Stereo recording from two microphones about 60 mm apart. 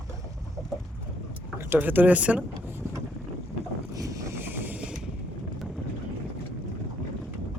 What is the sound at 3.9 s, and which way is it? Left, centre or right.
Boat, right.